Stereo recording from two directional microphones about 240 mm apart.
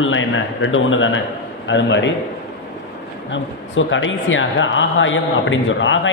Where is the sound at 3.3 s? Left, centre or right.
Left.